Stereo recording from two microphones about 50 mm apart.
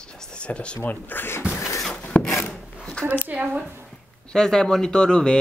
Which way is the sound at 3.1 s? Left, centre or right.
Right.